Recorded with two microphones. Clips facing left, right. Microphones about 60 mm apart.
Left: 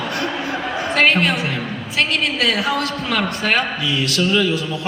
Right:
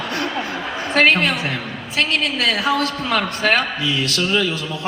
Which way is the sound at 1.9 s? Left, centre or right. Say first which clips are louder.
Even; right.